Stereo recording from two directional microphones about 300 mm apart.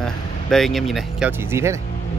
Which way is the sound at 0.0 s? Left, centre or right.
Centre.